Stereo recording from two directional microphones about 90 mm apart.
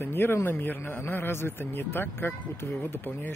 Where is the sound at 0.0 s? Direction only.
25° left (ahead or behind).